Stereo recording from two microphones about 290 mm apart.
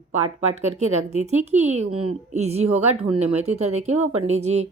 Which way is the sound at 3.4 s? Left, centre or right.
Right.